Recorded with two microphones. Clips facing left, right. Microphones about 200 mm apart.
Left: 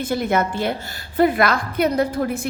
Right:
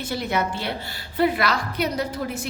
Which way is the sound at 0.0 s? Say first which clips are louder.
Left 5 dB; 50° left (ahead or behind).